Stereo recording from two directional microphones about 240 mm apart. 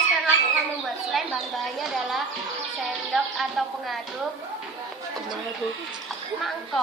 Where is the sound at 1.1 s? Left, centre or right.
Centre.